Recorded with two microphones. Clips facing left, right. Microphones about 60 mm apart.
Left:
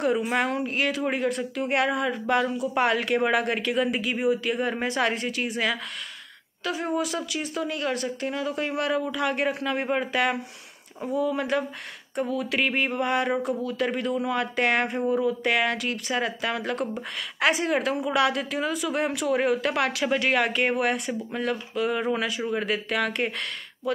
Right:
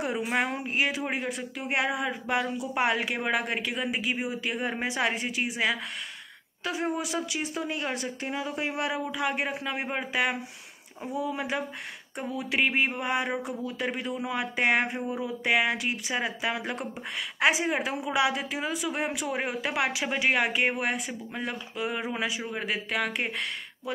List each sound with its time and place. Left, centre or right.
0.0 s a woman's voice: centre
6.6 s a woman's voice: right; by 23.3 s centre